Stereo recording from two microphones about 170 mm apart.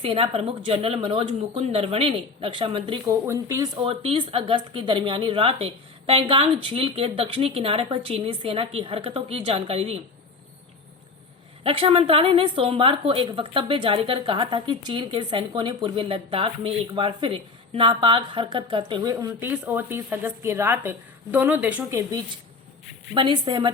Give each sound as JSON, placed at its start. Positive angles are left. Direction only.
{"t": 0.0, "sound": "a woman's voice", "side_deg": -35}
{"t": 3.1, "sound": "speech", "side_deg": -20}
{"t": 3.8, "sound": "a woman's voice", "side_deg": -35}
{"t": 11.6, "sound": "a woman's voice", "side_deg": -35}
{"t": 23.1, "sound": "a woman's voice", "side_deg": -25}